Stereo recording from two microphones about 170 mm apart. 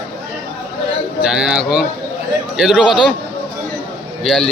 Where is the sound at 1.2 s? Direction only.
5° right (ahead or behind).